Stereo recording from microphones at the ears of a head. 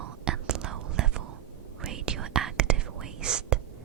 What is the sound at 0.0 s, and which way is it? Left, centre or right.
Whispering, right.